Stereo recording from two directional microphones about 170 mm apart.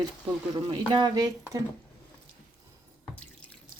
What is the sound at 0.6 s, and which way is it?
Speech, 25° right (ahead or behind).